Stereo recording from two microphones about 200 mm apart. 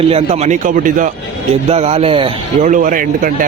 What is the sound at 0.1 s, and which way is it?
Speech, 35° right (ahead or behind).